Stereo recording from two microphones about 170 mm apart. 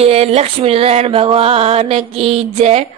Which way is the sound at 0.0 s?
35° right (ahead or behind).